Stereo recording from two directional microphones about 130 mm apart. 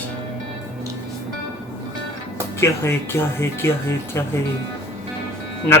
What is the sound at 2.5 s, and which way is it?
Speech, 20° left (ahead or behind).